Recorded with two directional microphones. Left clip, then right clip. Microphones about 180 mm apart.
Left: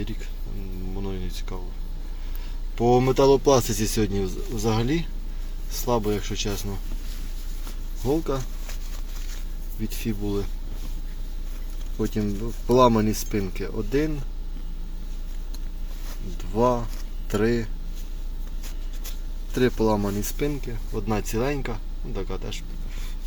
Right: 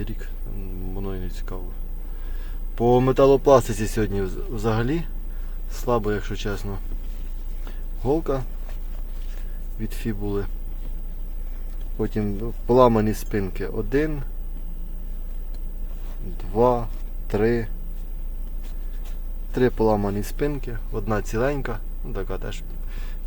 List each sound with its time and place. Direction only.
0.0 s speech: centre (ahead or behind)
0.9 s a sound: centre (ahead or behind)
2.7 s speech: centre (ahead or behind)
3.7 s speech: 15° right (ahead or behind)
3.9 s speech: 5° left (ahead or behind)
8.0 s speech: 5° right (ahead or behind)
9.8 s speech: centre (ahead or behind)
11.9 s speech: 5° right (ahead or behind)
16.4 s speech: 10° right (ahead or behind)
19.5 s speech: 10° right (ahead or behind)